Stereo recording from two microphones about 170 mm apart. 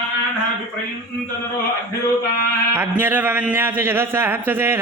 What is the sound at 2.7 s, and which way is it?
A man's voice, 10° right (ahead or behind).